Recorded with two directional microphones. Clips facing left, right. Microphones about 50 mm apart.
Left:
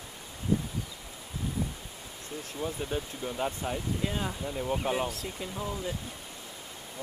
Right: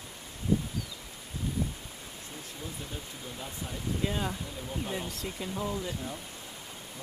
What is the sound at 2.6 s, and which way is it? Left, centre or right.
Speech, left.